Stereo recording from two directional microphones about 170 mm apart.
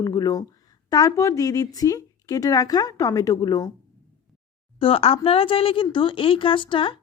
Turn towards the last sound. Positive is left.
turn(degrees=30)  # may be behind; listen again after turning